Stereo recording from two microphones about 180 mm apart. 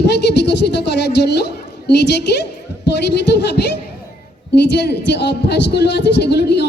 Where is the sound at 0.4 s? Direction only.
70° left (ahead or behind).